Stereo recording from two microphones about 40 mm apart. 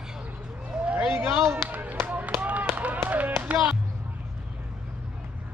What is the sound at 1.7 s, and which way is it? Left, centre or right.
Run, right.